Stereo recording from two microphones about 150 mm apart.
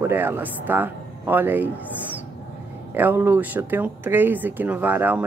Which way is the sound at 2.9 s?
15° right (ahead or behind).